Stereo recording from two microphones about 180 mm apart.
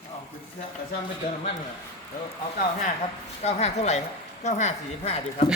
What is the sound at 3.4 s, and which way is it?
A woman's voice, 35° left (ahead or behind).